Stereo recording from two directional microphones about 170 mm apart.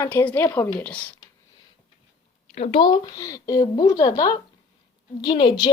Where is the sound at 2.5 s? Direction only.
40° left (ahead or behind).